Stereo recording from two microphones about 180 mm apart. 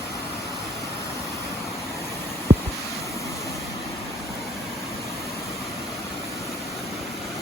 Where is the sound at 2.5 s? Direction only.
20° right (ahead or behind).